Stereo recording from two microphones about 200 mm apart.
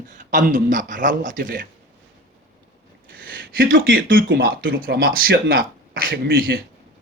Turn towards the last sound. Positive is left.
turn(degrees=-50)  # may be behind; listen again after turning